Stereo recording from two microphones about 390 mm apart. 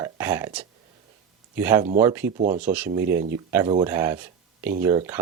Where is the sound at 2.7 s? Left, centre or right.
Centre.